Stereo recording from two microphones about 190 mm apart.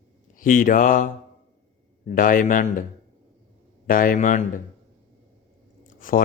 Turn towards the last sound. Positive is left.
turn(degrees=45)  # may be behind; listen again after turning